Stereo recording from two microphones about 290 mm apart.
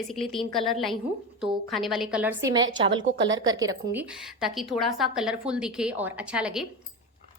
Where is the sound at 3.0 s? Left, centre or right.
Right.